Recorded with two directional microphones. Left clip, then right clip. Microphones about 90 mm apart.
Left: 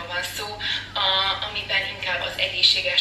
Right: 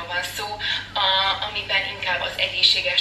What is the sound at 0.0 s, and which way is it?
Speech, 25° right (ahead or behind).